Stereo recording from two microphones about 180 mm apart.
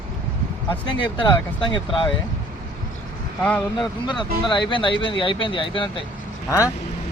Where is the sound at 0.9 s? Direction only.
25° left (ahead or behind).